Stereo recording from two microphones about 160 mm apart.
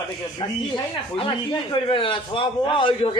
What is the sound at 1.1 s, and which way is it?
A man's voice, 35° left (ahead or behind).